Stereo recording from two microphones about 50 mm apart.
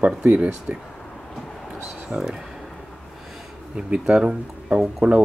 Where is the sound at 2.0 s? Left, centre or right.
Centre.